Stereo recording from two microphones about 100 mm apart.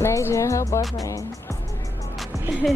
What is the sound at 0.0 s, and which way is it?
Music, 30° left (ahead or behind).